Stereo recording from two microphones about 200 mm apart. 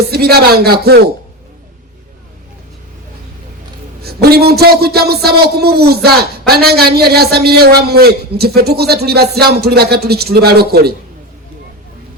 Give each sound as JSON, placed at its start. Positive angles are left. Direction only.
{"t": 0.1, "sound": "a man's voice", "side_deg": -50}
{"t": 4.0, "sound": "a man's voice", "side_deg": -50}